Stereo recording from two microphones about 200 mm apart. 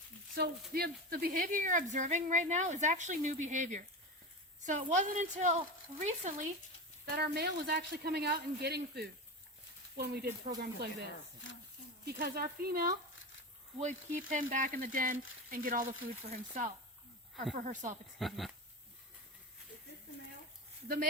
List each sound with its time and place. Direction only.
0.3 s speech: 50° right (ahead or behind)
7.0 s speech: 50° right (ahead or behind)
13.7 s speech: 40° right (ahead or behind)
17.6 s speech: 40° right (ahead or behind)
18.2 s speech: centre (ahead or behind)
20.8 s speech: 45° right (ahead or behind)